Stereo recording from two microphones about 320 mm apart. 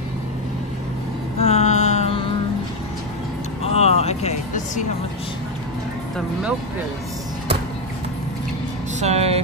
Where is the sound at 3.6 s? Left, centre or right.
Centre.